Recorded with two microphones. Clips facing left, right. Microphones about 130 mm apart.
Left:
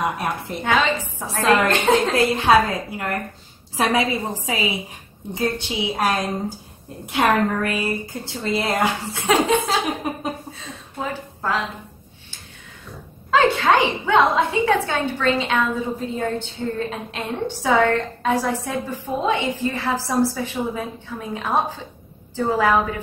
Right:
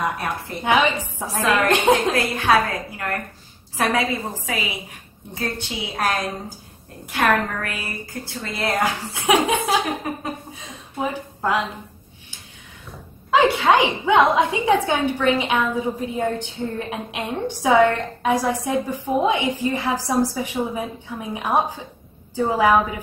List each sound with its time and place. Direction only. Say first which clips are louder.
0.0 s a woman's voice: left 1 dB; 20° left (ahead or behind)
0.7 s a woman's voice: right 1 dB; 15° right (ahead or behind)
2.1 s a woman's voice: left 3 dB; 25° left (ahead or behind)
9.1 s a woman's voice: even; 15° right (ahead or behind)
13.3 s a woman's voice: even; 15° right (ahead or behind)